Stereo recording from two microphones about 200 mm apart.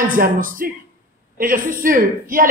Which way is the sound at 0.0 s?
45° right (ahead or behind).